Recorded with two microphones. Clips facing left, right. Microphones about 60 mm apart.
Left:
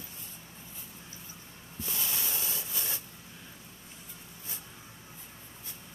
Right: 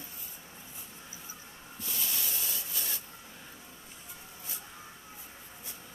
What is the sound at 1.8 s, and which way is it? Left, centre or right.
Sanding, left.